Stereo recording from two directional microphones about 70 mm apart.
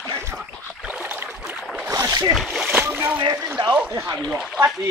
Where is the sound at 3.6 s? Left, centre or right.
Right.